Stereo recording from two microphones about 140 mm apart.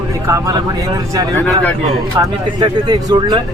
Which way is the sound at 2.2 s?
30° right (ahead or behind).